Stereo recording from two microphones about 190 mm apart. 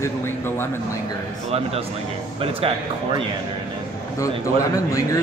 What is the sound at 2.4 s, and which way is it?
Speech, 30° right (ahead or behind).